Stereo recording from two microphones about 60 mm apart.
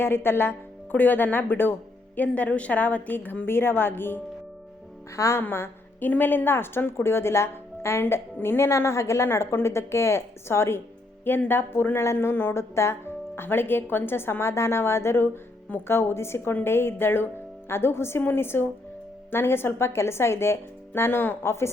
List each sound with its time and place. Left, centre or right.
0.0 s a woman's voice: left
5.1 s a woman's voice: left
5.4 s a woman's voice: left
9.3 s speech: left
11.3 s speech: left